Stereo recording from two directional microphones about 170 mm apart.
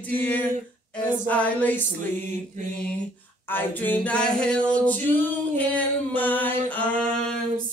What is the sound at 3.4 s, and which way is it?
A capella, 10° left (ahead or behind).